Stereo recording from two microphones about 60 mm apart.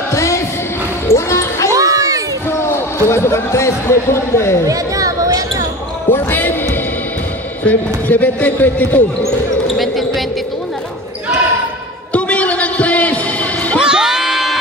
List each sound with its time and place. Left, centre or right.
0.1 s music: left
1.0 s basketball bounce: left
1.7 s a sound: right
2.7 s speech: left
4.6 s basketball bounce: right
6.0 s basketball bounce: left
7.6 s a man's voice: left
9.8 s basketball bounce: centre
12.1 s a sound: left
13.8 s a sound: centre